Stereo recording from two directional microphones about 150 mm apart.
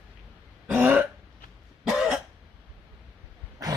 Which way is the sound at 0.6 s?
10° right (ahead or behind).